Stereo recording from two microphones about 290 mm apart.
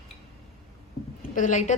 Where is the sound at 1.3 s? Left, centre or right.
Left.